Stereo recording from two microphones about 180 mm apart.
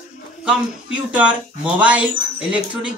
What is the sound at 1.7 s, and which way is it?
Speech, 5° right (ahead or behind).